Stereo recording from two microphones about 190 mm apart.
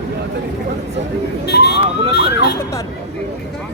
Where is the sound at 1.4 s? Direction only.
65° left (ahead or behind).